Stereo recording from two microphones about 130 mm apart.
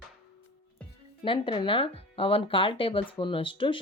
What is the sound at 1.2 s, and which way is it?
Speech, 40° left (ahead or behind).